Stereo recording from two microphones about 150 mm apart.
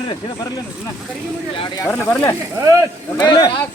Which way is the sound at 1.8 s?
15° left (ahead or behind).